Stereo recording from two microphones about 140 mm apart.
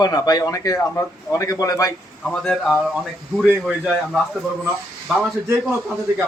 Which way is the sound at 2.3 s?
5° left (ahead or behind).